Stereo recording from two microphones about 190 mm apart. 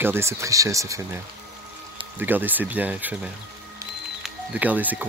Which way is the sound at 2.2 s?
10° right (ahead or behind).